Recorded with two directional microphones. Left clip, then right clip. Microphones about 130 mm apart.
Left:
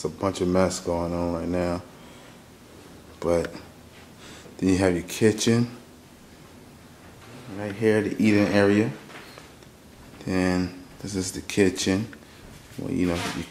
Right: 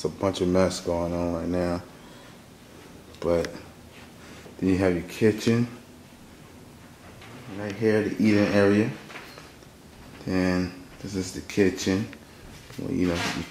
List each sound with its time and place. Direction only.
0.0 s speech: 15° left (ahead or behind)
3.2 s speech: 15° left (ahead or behind)
4.6 s speech: 20° left (ahead or behind)
7.5 s speech: 15° left (ahead or behind)
10.2 s speech: 15° left (ahead or behind)